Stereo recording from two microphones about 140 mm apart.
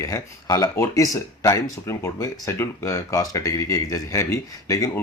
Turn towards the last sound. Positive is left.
turn(degrees=25)  # may be behind; listen again after turning